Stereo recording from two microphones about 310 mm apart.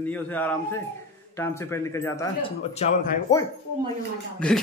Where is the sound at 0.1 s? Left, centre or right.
Centre.